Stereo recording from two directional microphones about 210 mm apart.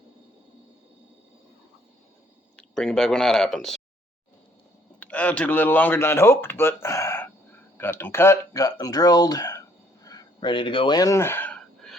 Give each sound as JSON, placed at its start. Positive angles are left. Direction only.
{"t": 2.6, "sound": "speech", "side_deg": 5}
{"t": 4.9, "sound": "speech", "side_deg": 5}
{"t": 6.8, "sound": "a sound", "side_deg": 15}
{"t": 7.8, "sound": "speech", "side_deg": 10}